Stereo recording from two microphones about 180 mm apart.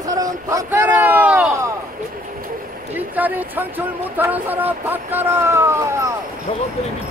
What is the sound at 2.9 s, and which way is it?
Speech, 10° right (ahead or behind).